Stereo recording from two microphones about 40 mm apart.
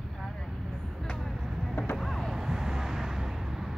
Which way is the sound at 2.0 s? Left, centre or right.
Centre.